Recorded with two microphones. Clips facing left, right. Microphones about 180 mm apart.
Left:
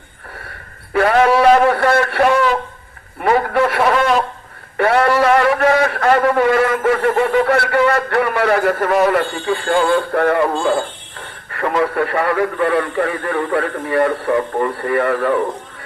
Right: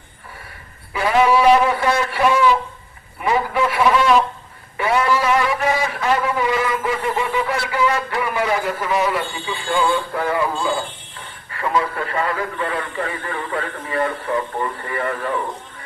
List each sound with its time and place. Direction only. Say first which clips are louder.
0.9 s a man's voice: left 3 dB; 55° left (ahead or behind)